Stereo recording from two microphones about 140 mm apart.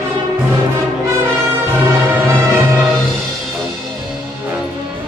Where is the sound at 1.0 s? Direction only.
20° right (ahead or behind).